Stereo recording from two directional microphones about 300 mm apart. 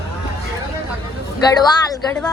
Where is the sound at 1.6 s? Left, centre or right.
Centre.